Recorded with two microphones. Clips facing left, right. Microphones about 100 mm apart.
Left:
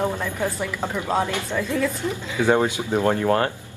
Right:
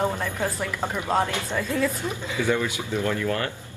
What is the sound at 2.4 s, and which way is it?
Speech, 50° left (ahead or behind).